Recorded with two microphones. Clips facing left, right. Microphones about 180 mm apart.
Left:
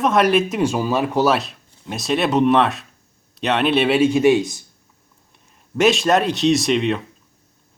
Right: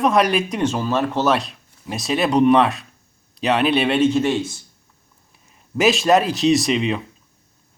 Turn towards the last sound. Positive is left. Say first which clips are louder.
# even
turn(degrees=0)  # may be behind; listen again after turning